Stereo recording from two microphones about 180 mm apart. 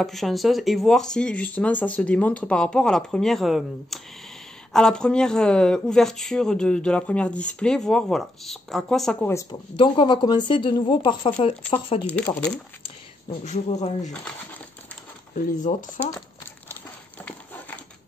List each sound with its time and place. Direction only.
0.0 s speech: centre (ahead or behind)
9.3 s speech: 15° left (ahead or behind)
9.8 s speech: 30° left (ahead or behind)
13.4 s speech: 40° left (ahead or behind)
15.3 s speech: 45° left (ahead or behind)